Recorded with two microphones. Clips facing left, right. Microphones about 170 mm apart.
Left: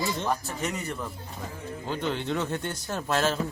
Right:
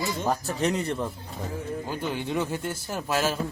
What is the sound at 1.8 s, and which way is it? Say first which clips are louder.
A man's voice: left 5 dB; 10° right (ahead or behind).